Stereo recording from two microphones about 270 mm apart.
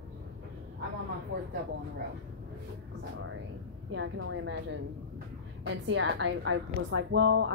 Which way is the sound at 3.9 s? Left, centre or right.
Right.